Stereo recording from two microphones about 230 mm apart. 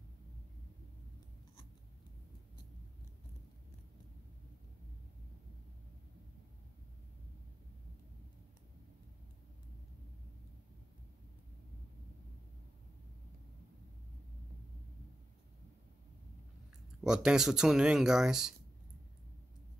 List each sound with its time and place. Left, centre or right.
17.0 s speech: centre